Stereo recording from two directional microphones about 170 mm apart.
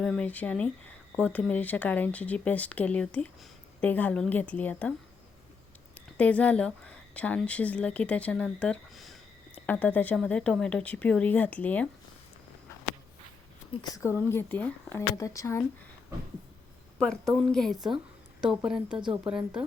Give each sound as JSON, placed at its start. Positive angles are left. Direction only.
{"t": 0.0, "sound": "speech", "side_deg": 5}
{"t": 6.1, "sound": "speech", "side_deg": 10}
{"t": 13.8, "sound": "speech", "side_deg": 20}
{"t": 17.0, "sound": "a woman's voice", "side_deg": 5}